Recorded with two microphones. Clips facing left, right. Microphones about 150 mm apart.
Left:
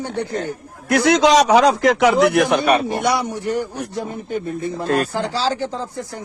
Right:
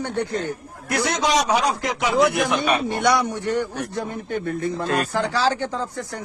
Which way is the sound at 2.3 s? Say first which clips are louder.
Left 5 dB; 65° left (ahead or behind).